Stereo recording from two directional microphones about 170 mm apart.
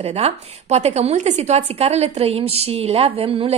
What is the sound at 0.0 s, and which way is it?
A woman's voice, 40° right (ahead or behind).